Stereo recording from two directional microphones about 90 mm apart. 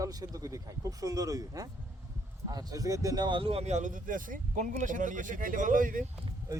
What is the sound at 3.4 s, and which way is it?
Speech, 90° right.